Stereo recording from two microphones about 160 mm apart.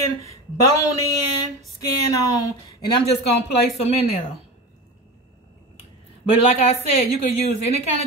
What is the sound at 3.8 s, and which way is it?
Speech, 40° left (ahead or behind).